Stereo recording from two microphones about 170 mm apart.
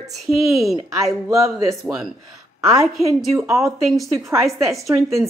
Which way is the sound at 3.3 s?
15° right (ahead or behind).